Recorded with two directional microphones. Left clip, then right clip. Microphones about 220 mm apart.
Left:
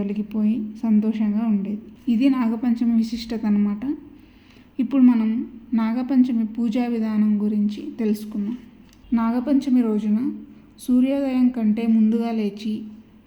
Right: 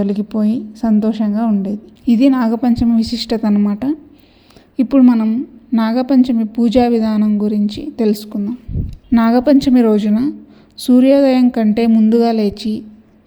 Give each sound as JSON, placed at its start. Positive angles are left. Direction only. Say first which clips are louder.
{"t": 0.0, "sound": "a woman's voice", "louder": "right 8 dB", "side_deg": -35}
{"t": 9.1, "sound": "a woman's voice", "louder": "right 10 dB", "side_deg": -45}